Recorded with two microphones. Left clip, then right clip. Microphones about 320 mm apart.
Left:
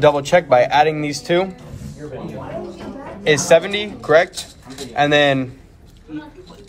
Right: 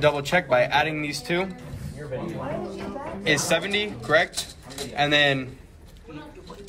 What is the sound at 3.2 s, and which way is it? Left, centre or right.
A man's voice, left.